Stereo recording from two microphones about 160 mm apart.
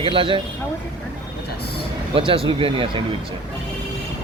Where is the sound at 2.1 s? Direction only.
35° right (ahead or behind).